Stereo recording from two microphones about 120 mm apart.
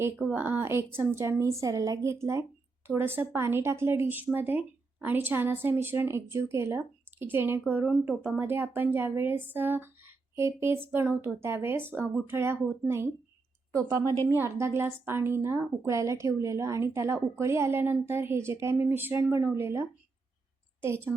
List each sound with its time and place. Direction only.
0.3 s speech: 15° right (ahead or behind)
14.3 s speech: 20° right (ahead or behind)
20.8 s speech: 20° right (ahead or behind)